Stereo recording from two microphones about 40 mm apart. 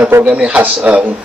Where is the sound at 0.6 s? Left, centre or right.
Right.